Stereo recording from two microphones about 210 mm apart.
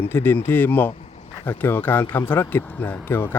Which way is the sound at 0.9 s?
30° left (ahead or behind).